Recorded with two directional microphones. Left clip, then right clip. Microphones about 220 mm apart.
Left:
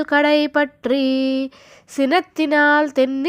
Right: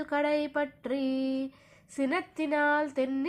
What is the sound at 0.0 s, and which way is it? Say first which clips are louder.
Speech: left 13 dB; 35° left (ahead or behind).